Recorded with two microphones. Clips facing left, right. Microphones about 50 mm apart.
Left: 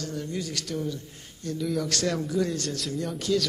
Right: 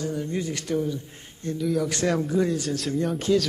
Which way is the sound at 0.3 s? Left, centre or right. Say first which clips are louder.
Right 5 dB; right.